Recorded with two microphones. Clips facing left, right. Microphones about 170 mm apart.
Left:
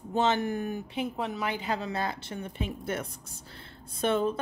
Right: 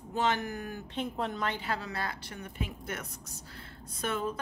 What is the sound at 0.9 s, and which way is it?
A woman's voice, 5° left (ahead or behind).